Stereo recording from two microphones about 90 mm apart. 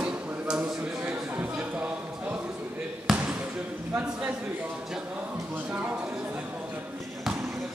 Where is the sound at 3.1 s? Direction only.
15° right (ahead or behind).